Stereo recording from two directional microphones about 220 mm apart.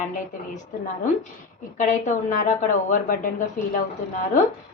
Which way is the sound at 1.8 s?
35° left (ahead or behind).